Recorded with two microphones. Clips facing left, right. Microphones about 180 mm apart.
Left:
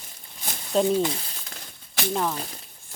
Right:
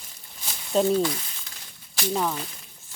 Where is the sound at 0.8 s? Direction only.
20° left (ahead or behind).